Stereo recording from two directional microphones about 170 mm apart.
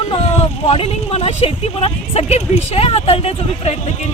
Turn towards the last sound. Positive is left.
turn(degrees=35)  # may be behind; listen again after turning